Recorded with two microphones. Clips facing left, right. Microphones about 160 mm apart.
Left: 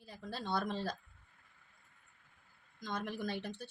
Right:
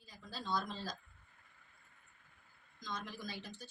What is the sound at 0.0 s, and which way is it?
Speech, 60° left (ahead or behind).